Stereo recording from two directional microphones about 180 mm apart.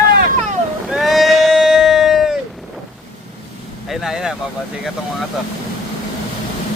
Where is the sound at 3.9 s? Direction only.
Centre (ahead or behind).